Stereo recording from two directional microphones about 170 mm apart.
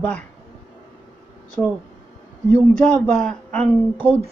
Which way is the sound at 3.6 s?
30° right (ahead or behind).